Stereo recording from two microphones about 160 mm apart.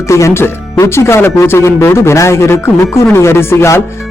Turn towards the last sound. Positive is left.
turn(degrees=15)  # may be behind; listen again after turning